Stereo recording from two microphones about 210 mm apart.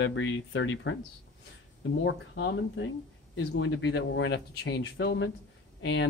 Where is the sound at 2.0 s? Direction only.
60° left (ahead or behind).